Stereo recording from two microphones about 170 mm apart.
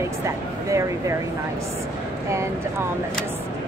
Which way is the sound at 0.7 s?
20° right (ahead or behind).